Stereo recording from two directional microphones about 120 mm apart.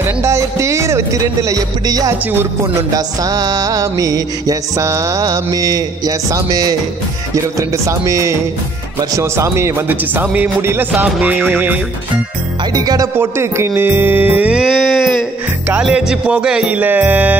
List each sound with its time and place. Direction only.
0.0 s music: 25° right (ahead or behind)
11.1 s music: 5° right (ahead or behind)
12.7 s music: 30° right (ahead or behind)
13.1 s music: 20° right (ahead or behind)